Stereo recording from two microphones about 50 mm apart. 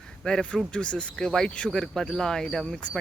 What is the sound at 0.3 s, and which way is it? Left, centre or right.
Speech, centre.